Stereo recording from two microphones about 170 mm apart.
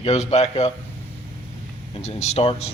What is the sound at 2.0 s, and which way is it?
Speech, 40° left (ahead or behind).